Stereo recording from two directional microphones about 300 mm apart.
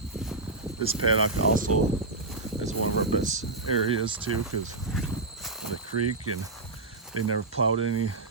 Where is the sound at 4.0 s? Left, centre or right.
Centre.